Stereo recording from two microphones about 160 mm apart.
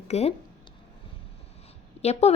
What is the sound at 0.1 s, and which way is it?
Speech, 40° left (ahead or behind).